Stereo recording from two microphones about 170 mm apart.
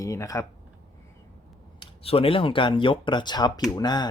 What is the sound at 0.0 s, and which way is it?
Speech, 20° left (ahead or behind).